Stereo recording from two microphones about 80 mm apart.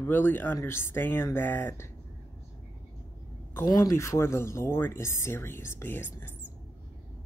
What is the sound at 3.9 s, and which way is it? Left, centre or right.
Speech, left.